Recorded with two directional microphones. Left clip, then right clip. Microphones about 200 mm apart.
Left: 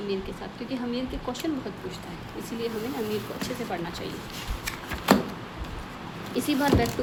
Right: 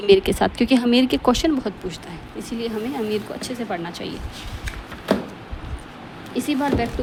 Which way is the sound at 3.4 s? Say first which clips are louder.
Right 4 dB; 30° right (ahead or behind).